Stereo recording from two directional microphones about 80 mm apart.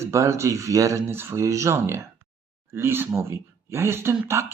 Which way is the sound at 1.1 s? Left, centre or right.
Right.